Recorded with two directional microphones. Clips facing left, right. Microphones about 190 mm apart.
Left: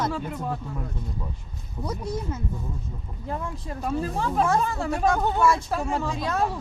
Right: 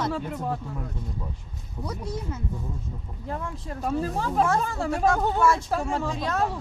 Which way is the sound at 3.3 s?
15° left (ahead or behind).